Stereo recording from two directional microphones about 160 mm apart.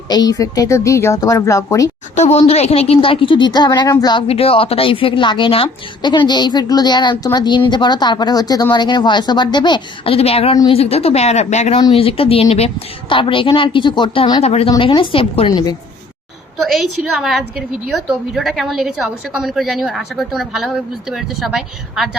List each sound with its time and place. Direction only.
0.1 s a woman's voice: 25° left (ahead or behind)
2.1 s a woman's voice: 45° left (ahead or behind); by 4.2 s 25° left (ahead or behind)
4.3 s a woman's voice: 40° left (ahead or behind)
14.4 s a woman's voice: 40° left (ahead or behind)
16.7 s a woman's voice: 5° right (ahead or behind)